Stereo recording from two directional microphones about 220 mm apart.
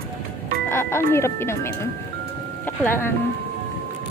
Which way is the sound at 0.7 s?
10° left (ahead or behind).